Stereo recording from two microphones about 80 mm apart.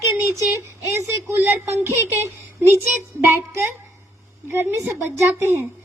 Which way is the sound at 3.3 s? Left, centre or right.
Right.